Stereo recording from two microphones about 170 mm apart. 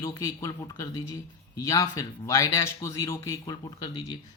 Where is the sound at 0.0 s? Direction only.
20° left (ahead or behind).